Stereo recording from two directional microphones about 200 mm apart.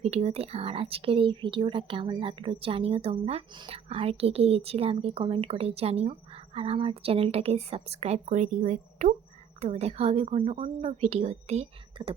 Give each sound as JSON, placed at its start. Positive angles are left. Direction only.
{"t": 0.0, "sound": "a woman's voice", "side_deg": -30}